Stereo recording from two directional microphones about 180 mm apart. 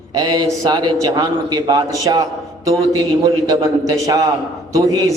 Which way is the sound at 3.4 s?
20° right (ahead or behind).